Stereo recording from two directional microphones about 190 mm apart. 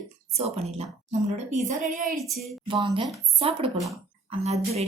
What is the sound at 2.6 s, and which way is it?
A woman's voice, 25° right (ahead or behind).